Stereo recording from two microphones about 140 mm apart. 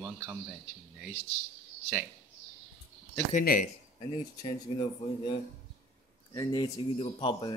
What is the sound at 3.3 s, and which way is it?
Speech, 75° left (ahead or behind).